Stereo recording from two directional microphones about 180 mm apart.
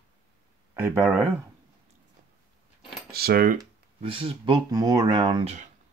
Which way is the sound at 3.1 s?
60° right (ahead or behind).